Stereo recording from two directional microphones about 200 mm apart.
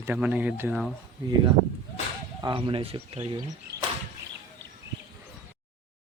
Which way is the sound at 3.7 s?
55° right (ahead or behind).